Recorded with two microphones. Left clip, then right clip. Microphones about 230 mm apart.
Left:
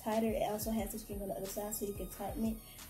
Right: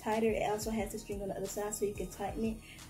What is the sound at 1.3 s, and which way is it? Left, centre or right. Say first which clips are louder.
Speech: left 1 dB; centre.